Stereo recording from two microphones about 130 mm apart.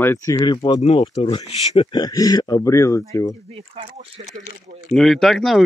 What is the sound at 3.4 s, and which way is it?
Speech, 55° right (ahead or behind).